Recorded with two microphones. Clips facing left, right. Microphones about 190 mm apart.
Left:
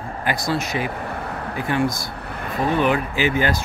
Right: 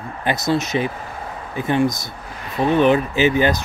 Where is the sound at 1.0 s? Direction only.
65° left (ahead or behind).